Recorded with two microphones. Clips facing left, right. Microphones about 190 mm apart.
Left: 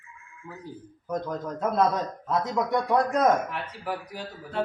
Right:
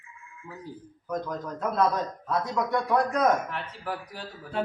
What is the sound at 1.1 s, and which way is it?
Speech, 25° left (ahead or behind).